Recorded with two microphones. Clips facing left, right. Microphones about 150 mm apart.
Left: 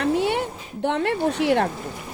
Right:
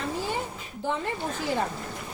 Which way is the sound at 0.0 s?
70° left (ahead or behind).